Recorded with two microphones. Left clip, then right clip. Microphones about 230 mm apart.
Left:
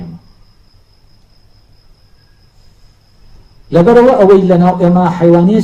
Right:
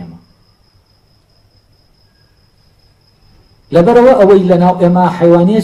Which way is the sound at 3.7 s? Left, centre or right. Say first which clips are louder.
Even; right.